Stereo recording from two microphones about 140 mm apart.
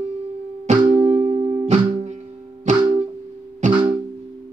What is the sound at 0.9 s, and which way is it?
Music, 55° right (ahead or behind).